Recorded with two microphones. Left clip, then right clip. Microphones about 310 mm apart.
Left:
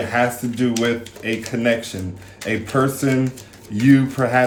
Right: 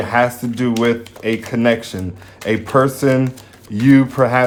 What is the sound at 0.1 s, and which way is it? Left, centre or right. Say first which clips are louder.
Speech: right 5 dB; centre.